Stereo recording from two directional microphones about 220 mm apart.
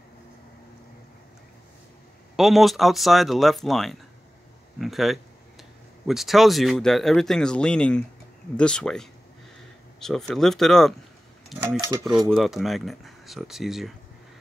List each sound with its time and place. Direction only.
2.3 s speech: centre (ahead or behind)
11.6 s cutlery: 15° right (ahead or behind)
12.0 s speech: centre (ahead or behind)